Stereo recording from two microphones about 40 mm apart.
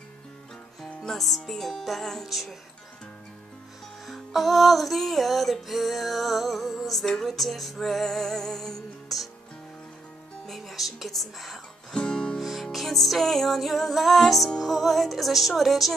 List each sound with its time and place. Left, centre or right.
1.0 s music: centre
4.0 s music: centre
10.4 s speech: centre
11.9 s music: centre
12.4 s music: centre